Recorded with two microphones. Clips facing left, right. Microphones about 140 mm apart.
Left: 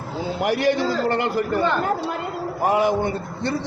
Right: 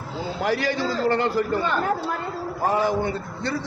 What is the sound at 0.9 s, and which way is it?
A man's voice, 20° left (ahead or behind).